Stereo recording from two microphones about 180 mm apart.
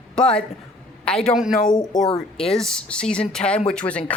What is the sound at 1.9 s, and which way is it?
Speech, 25° left (ahead or behind).